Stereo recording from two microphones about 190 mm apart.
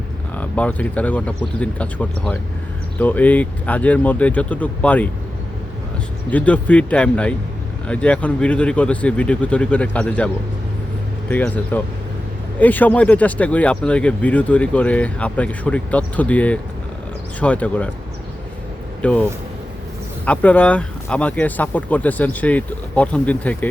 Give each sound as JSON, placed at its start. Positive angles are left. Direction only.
{"t": 0.3, "sound": "speech", "side_deg": 5}
{"t": 6.3, "sound": "speech", "side_deg": 5}
{"t": 11.3, "sound": "speech", "side_deg": 10}
{"t": 19.0, "sound": "speech", "side_deg": 5}